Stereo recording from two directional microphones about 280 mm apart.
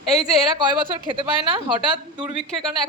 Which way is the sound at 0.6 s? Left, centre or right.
Centre.